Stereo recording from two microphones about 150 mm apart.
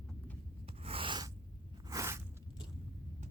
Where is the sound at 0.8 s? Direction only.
35° right (ahead or behind).